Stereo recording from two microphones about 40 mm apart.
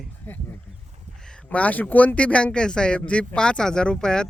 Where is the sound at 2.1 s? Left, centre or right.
Left.